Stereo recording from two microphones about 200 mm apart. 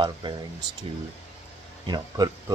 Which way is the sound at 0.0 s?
20° right (ahead or behind).